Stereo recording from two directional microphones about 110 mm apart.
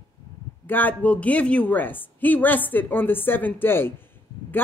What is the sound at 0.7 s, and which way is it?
A woman's voice, 15° left (ahead or behind).